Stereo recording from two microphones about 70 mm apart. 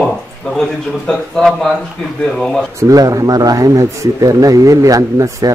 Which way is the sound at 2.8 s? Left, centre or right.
Right.